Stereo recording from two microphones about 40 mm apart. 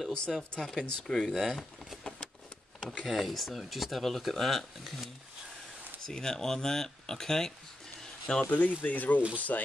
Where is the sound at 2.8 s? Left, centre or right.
Left.